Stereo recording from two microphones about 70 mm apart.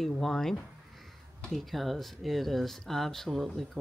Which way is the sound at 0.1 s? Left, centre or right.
Centre.